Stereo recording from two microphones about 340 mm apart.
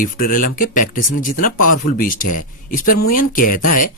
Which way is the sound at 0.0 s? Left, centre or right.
Left.